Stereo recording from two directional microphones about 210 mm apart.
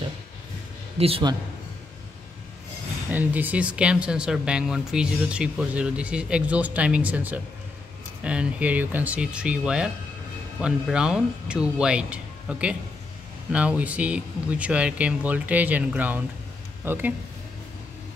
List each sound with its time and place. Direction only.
0.9 s a man's voice: 25° right (ahead or behind)
3.1 s speech: 10° right (ahead or behind)